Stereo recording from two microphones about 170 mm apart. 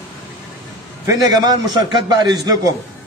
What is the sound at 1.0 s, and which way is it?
A man's voice, 25° right (ahead or behind).